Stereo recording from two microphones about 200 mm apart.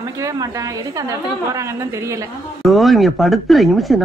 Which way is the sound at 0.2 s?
15° right (ahead or behind).